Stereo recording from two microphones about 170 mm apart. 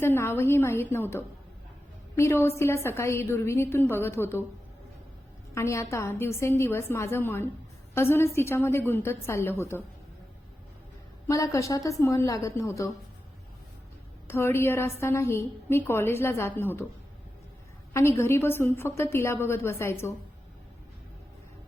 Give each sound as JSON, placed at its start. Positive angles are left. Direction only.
{"t": 0.0, "sound": "a woman's voice", "side_deg": 15}
{"t": 5.5, "sound": "a woman's voice", "side_deg": 15}
{"t": 11.3, "sound": "a woman's voice", "side_deg": 20}
{"t": 14.3, "sound": "a woman's voice", "side_deg": 15}
{"t": 17.9, "sound": "a woman's voice", "side_deg": 15}